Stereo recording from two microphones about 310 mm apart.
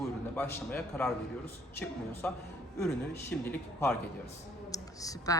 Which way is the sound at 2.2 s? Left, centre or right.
Centre.